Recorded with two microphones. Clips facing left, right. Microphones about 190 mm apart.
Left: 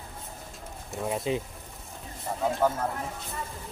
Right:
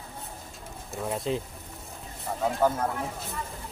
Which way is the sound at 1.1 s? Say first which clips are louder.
Even; 5° left (ahead or behind).